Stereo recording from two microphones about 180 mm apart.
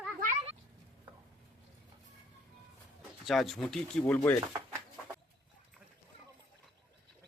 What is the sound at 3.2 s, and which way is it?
Speech, centre (ahead or behind).